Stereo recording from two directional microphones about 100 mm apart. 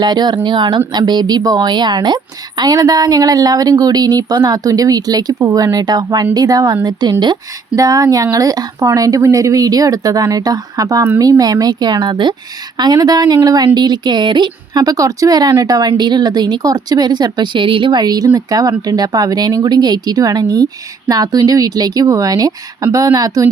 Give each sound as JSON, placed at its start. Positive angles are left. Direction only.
{"t": 0.0, "sound": "a woman's voice", "side_deg": -45}
{"t": 7.8, "sound": "a woman's voice", "side_deg": -35}